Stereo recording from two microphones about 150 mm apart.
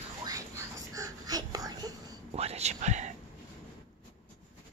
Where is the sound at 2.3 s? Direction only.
45° right (ahead or behind).